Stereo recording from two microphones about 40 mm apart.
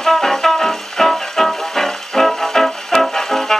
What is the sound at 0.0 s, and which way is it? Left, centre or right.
Music, centre.